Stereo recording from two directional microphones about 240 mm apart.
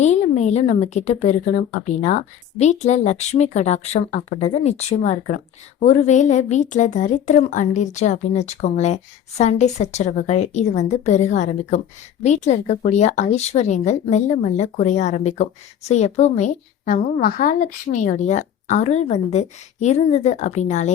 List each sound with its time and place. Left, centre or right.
0.0 s a woman's voice: left